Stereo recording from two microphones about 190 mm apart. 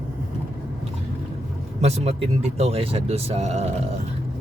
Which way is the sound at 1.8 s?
35° right (ahead or behind).